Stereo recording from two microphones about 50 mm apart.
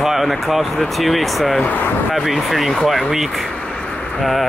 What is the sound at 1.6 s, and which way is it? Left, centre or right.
Speech, left.